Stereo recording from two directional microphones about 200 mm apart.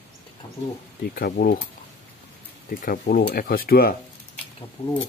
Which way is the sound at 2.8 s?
45° left (ahead or behind).